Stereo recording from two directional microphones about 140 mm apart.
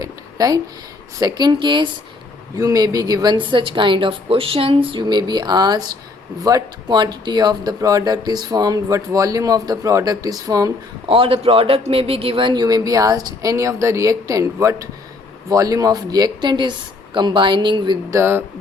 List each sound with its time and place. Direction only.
0.0 s a sound: 25° right (ahead or behind)
1.2 s speech: 30° right (ahead or behind)
11.1 s speech: 40° right (ahead or behind)
18.1 s speech: 15° right (ahead or behind)